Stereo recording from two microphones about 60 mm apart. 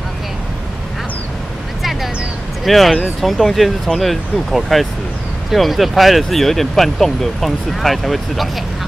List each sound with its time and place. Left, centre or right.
1.8 s vehicle: centre
2.6 s speech: centre